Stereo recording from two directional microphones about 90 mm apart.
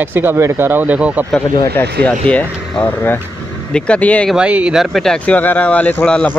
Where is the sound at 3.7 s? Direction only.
10° left (ahead or behind).